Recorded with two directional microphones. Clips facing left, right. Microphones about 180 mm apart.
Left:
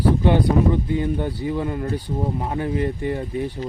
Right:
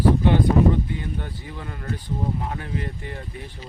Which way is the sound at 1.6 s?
25° left (ahead or behind).